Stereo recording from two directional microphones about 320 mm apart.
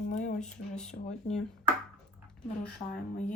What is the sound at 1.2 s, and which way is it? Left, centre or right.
Speech, left.